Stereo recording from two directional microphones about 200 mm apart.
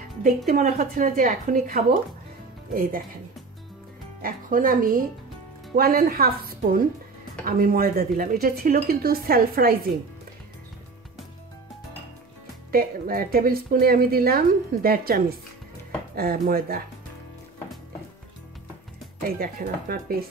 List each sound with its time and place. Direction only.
0.5 s a woman's voice: 45° right (ahead or behind)
4.2 s a woman's voice: 45° right (ahead or behind)
12.7 s a woman's voice: 45° right (ahead or behind)
19.2 s a woman's voice: 45° right (ahead or behind)